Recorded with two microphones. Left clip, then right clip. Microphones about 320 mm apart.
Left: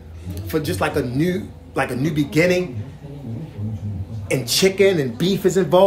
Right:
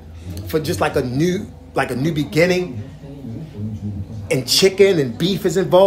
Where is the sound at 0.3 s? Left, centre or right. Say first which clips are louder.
Right 2 dB; centre.